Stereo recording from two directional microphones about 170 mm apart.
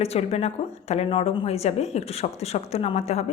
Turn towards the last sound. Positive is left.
turn(degrees=40)  # may be behind; listen again after turning